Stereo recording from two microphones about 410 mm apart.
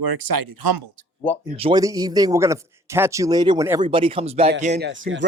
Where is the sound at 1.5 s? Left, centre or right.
Centre.